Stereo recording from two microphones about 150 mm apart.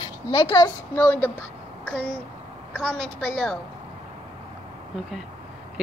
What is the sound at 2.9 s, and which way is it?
Speech, 5° left (ahead or behind).